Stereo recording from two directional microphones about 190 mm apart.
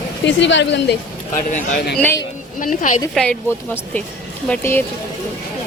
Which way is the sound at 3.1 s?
5° left (ahead or behind).